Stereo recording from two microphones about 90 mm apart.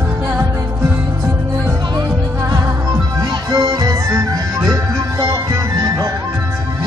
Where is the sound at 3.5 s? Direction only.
40° right (ahead or behind).